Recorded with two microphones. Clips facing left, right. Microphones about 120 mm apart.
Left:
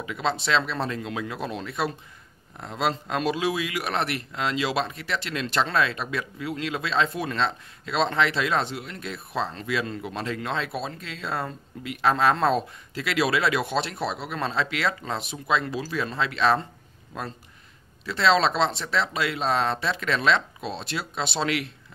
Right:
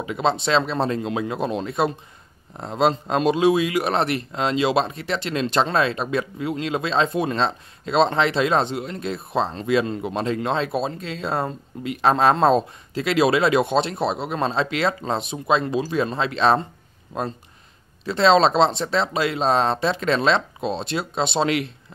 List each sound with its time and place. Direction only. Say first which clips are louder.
0.0 s speech: right 5 dB; 25° right (ahead or behind)